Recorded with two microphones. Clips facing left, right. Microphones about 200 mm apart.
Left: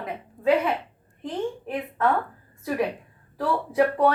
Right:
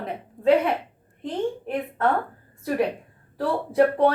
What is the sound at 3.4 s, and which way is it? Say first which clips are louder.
Speech: right 2 dB; 30° right (ahead or behind).